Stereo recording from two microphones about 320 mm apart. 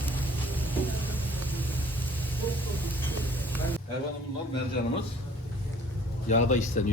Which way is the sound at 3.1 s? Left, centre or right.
Centre.